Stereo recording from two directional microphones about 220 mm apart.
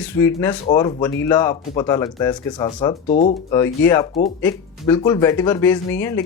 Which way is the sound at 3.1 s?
35° left (ahead or behind).